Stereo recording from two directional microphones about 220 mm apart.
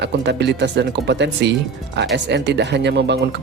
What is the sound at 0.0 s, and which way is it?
Speech, 50° right (ahead or behind).